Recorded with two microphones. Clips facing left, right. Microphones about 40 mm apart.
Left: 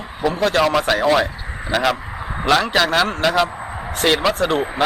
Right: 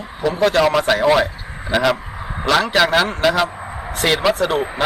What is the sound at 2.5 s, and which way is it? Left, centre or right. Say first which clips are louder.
Speech: right 2 dB; centre.